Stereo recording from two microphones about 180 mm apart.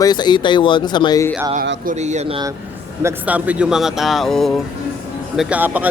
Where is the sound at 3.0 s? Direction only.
10° right (ahead or behind).